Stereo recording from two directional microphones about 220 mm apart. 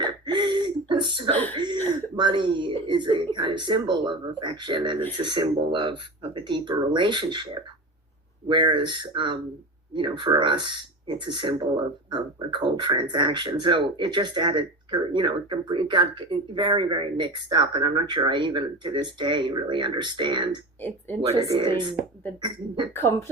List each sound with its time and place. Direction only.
0.0 s throat clearing: 20° right (ahead or behind)
1.5 s a sound: 20° right (ahead or behind)
2.1 s speech: 20° right (ahead or behind)
8.4 s speech: 20° right (ahead or behind)
23.0 s speech: 10° left (ahead or behind)